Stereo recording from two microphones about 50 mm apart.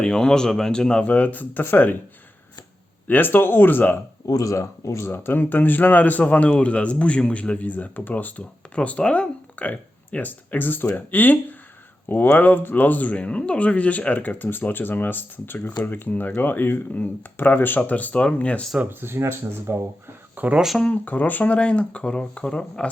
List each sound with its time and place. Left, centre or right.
0.0 s speech: centre
1.0 s speech: left
3.1 s speech: left
4.4 s speech: left
7.7 s speech: left
18.9 s speech: right
20.3 s a sound: right
20.9 s speech: left